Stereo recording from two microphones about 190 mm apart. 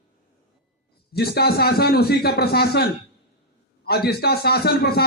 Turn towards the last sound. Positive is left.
turn(degrees=55)  # may be behind; listen again after turning